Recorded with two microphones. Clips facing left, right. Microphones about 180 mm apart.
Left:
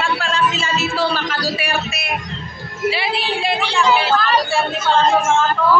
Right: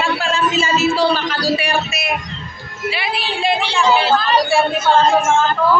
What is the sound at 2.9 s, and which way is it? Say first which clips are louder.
Speech: right 1 dB; 25° left (ahead or behind).